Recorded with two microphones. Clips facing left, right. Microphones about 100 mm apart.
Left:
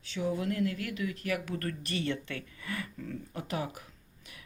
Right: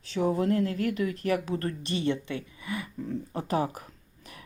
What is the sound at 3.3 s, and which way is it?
Speech, 35° right (ahead or behind).